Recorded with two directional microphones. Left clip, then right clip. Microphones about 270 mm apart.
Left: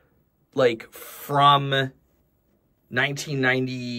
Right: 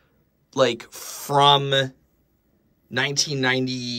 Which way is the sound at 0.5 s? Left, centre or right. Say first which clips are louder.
Even; centre.